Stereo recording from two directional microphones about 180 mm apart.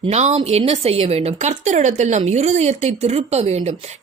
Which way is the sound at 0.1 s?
40° right (ahead or behind).